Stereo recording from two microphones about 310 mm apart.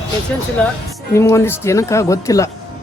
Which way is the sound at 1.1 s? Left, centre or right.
Centre.